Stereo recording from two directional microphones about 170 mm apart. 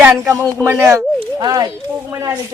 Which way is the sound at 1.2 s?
20° right (ahead or behind).